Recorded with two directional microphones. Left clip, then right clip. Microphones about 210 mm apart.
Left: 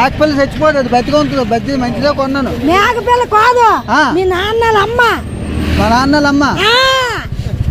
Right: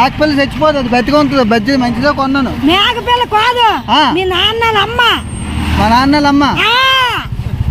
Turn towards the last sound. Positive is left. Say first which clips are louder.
# even
turn(degrees=-20)  # may be behind; listen again after turning